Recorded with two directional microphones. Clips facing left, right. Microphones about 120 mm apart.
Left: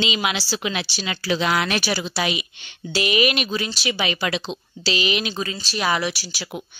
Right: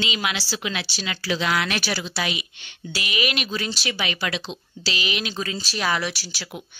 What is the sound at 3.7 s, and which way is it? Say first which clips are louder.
Speech: left 3 dB; 5° left (ahead or behind).